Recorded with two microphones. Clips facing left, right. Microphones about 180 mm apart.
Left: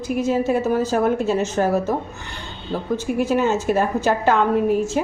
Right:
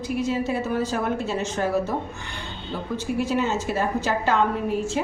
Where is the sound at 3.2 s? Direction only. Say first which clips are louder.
Left 7 dB; 50° left (ahead or behind).